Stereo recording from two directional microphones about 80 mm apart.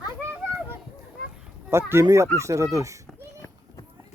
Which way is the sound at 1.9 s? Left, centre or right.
Right.